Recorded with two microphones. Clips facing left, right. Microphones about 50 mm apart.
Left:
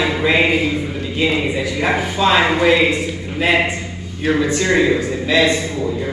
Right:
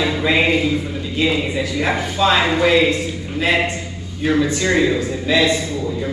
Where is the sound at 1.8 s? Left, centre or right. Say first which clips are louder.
Left 1 dB; centre.